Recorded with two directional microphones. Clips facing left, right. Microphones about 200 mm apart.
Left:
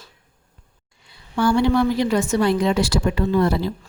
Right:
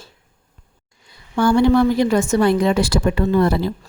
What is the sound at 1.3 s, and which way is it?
A woman's voice, 50° right (ahead or behind).